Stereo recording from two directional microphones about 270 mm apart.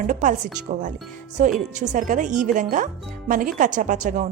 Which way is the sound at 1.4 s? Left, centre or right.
Right.